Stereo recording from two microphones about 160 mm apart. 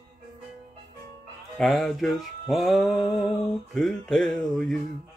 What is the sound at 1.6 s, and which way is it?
Music, centre (ahead or behind).